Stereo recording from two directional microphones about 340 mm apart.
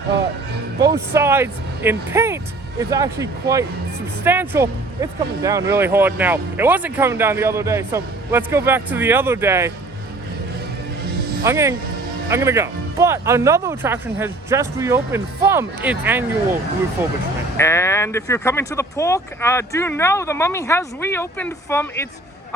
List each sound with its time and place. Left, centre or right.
1.1 s speech: centre
11.4 s speech: centre
17.6 s speech: centre